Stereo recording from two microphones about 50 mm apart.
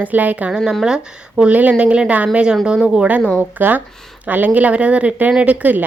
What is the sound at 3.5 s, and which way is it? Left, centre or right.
Speech, right.